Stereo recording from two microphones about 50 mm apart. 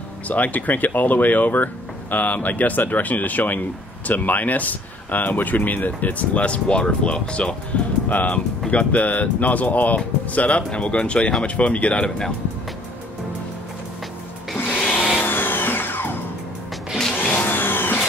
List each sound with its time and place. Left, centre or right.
0.3 s speech: left
8.1 s speech: left
14.7 s music: left
15.2 s music: left
17.1 s music: left
17.5 s vehicle: left